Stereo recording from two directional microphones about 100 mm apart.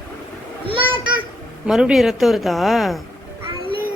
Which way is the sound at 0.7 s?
60° right (ahead or behind).